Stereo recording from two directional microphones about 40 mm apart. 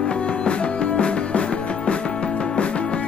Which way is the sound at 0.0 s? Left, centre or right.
Left.